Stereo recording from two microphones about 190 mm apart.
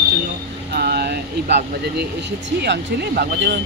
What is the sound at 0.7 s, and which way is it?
Vehicle, 55° right (ahead or behind).